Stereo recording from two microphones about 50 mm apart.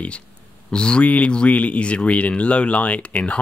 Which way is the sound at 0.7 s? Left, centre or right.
Centre.